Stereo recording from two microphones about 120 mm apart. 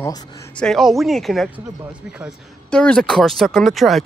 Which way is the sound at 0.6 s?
Centre (ahead or behind).